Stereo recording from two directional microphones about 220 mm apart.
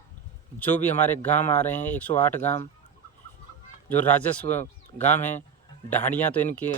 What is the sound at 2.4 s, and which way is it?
Speech, 30° left (ahead or behind).